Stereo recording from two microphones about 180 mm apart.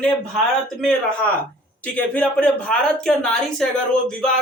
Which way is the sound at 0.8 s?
5° left (ahead or behind).